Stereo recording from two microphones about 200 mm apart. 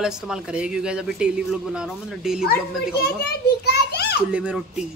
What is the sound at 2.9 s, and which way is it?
Children playing, 55° left (ahead or behind).